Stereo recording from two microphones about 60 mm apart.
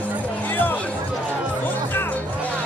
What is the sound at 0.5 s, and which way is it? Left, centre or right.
Music, left.